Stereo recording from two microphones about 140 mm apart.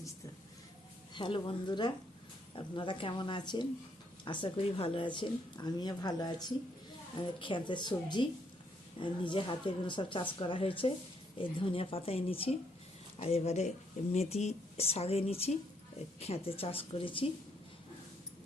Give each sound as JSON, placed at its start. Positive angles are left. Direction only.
{"t": 1.1, "sound": "a woman's voice", "side_deg": 35}